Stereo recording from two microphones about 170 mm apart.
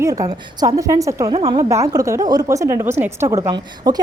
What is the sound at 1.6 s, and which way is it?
A woman's voice, 15° right (ahead or behind).